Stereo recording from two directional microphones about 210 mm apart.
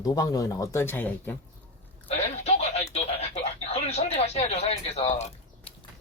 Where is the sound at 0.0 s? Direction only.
15° left (ahead or behind).